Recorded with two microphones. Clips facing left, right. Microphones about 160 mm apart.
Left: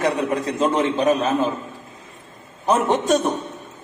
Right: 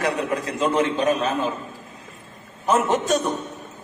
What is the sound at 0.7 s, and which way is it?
Speech, centre (ahead or behind).